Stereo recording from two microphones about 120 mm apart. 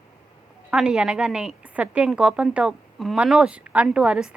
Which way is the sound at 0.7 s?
10° right (ahead or behind).